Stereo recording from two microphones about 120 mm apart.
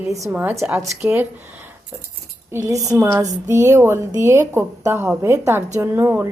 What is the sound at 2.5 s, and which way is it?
A woman's voice, 20° right (ahead or behind).